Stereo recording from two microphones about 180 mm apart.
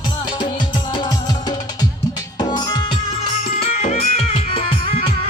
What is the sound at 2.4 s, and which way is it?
Music, 25° left (ahead or behind).